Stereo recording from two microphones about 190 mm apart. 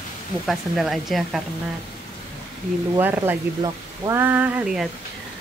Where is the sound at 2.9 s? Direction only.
10° right (ahead or behind).